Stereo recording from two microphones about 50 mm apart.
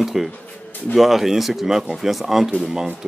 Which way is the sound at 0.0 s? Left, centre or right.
Centre.